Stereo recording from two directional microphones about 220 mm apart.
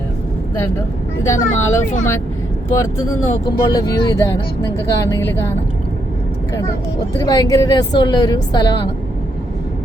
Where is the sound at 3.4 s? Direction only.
15° left (ahead or behind).